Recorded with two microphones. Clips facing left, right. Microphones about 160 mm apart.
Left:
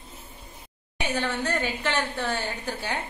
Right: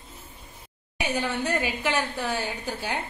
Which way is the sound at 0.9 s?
10° right (ahead or behind).